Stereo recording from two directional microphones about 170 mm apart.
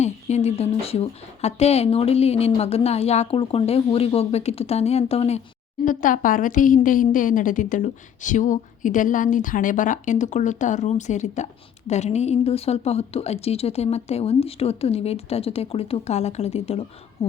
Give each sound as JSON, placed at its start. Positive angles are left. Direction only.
{"t": 0.0, "sound": "speech", "side_deg": 40}
{"t": 5.8, "sound": "a woman's voice", "side_deg": 50}
{"t": 17.2, "sound": "a sound", "side_deg": 35}